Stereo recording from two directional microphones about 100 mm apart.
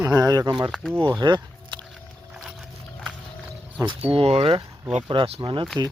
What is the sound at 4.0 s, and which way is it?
Speech, 75° right (ahead or behind).